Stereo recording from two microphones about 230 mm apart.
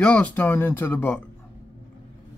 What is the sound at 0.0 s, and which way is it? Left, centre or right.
Speech, centre.